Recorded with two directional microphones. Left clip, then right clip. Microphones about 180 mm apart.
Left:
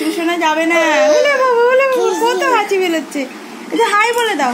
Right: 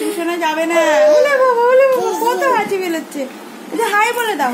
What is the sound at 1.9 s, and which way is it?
Speech, 10° left (ahead or behind).